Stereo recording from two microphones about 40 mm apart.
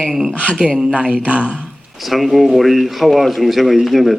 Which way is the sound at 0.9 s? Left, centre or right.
Right.